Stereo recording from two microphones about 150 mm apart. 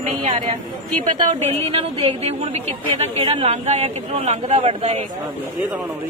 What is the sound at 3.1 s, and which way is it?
Speech, 40° right (ahead or behind).